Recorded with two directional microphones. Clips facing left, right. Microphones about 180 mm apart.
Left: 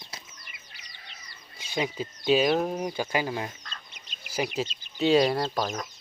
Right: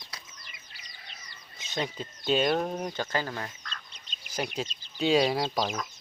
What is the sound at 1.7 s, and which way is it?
Speech, 5° left (ahead or behind).